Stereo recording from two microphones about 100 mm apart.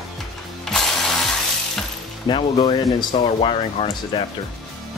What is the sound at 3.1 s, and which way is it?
Speech, 60° left (ahead or behind).